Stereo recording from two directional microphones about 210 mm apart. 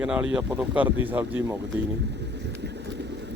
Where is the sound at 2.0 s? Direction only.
55° right (ahead or behind).